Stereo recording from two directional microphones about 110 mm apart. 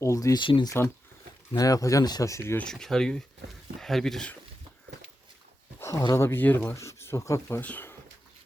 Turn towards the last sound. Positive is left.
turn(degrees=15)  # may be behind; listen again after turning